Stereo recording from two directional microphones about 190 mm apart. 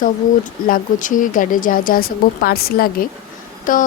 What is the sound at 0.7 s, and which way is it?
Speech, 45° left (ahead or behind).